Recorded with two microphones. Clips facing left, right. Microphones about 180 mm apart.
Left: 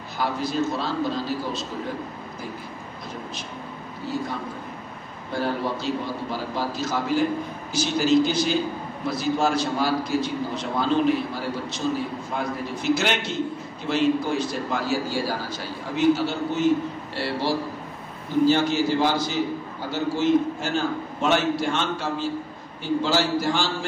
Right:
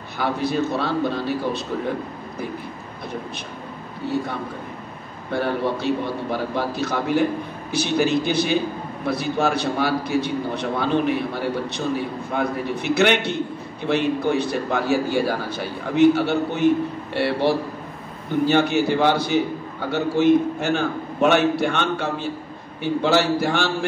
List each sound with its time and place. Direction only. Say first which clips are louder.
0.2 s a man's voice: right 3 dB; 60° right (ahead or behind)
4.0 s a man's voice: right 4 dB; 60° right (ahead or behind)